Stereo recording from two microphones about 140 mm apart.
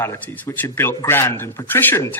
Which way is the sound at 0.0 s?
15° left (ahead or behind).